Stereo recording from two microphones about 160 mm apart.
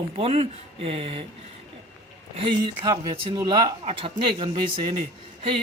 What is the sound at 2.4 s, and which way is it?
Speech, 30° right (ahead or behind).